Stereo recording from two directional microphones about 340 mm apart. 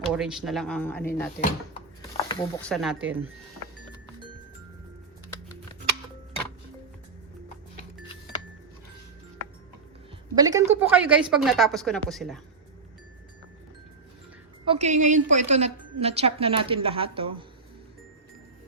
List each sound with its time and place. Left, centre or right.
0.0 s a woman's voice: centre
7.8 s music: centre
10.3 s a woman's voice: centre
14.6 s a woman's voice: centre